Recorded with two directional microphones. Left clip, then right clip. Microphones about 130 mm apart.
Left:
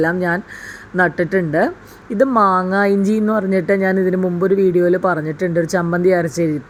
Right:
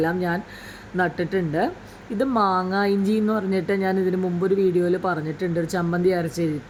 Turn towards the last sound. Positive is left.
turn(degrees=25)  # may be behind; listen again after turning